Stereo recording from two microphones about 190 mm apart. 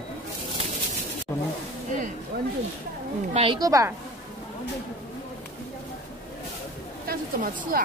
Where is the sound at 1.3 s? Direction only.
10° left (ahead or behind).